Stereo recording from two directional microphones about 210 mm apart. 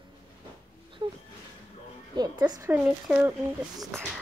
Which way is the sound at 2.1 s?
20° right (ahead or behind).